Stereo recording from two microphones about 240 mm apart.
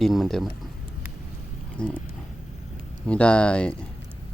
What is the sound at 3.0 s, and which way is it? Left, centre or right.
Speech, centre.